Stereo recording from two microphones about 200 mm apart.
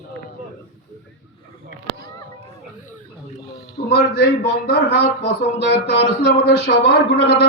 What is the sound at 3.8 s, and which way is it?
A man's voice, 50° left (ahead or behind).